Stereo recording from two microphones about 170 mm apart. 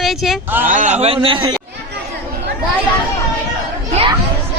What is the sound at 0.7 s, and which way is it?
Speech, 45° right (ahead or behind).